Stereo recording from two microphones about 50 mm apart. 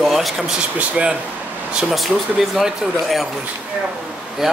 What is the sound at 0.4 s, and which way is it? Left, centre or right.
Speech, centre.